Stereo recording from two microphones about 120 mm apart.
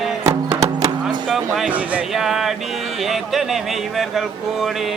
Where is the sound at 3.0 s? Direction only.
Centre (ahead or behind).